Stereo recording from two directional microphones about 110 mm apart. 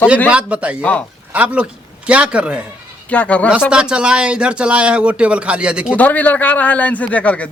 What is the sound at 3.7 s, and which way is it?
Speech, 10° right (ahead or behind).